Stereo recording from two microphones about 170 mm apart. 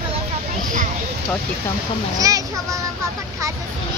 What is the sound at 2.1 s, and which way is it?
Speech, 20° right (ahead or behind).